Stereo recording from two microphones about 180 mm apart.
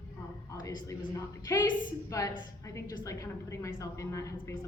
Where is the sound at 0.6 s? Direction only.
20° left (ahead or behind).